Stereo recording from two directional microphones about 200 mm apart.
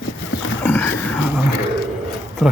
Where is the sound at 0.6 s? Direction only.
10° left (ahead or behind).